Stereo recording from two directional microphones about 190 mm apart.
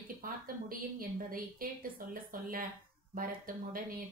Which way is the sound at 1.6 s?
50° right (ahead or behind).